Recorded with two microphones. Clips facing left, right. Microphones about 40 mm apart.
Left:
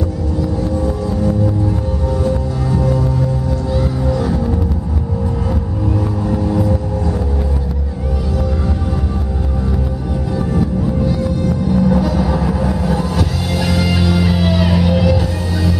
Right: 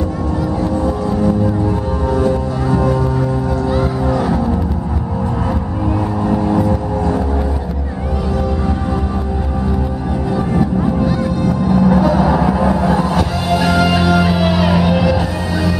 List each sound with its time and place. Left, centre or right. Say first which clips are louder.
2.0 s music: right 3 dB; centre
6.2 s vehicle: right 3 dB; centre
10.3 s music: right 2 dB; right